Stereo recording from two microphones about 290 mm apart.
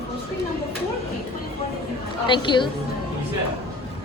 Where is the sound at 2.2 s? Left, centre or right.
Centre.